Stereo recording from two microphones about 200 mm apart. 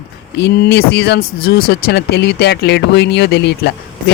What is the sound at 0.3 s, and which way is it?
Speech, 55° left (ahead or behind).